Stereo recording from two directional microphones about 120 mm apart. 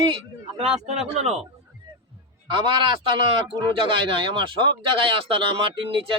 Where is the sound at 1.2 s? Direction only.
65° right (ahead or behind).